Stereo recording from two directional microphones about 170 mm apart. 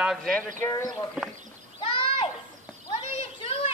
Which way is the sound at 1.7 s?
30° left (ahead or behind).